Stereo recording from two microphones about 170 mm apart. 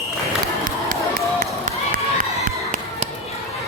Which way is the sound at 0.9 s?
55° right (ahead or behind).